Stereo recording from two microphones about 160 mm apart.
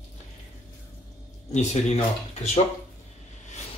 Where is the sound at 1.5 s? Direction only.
45° left (ahead or behind).